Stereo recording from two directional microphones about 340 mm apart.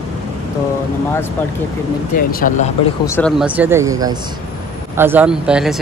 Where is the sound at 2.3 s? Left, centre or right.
Left.